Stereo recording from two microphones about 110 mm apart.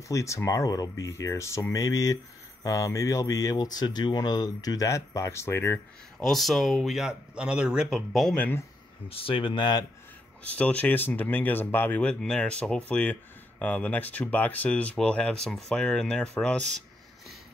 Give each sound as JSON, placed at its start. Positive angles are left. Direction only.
{"t": 0.1, "sound": "speech", "side_deg": 25}
{"t": 6.1, "sound": "speech", "side_deg": 0}
{"t": 8.4, "sound": "speech", "side_deg": 15}
{"t": 9.1, "sound": "speech", "side_deg": 55}
{"t": 10.4, "sound": "speech", "side_deg": 15}